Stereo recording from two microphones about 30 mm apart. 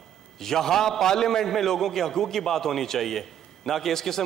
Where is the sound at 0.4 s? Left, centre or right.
Centre.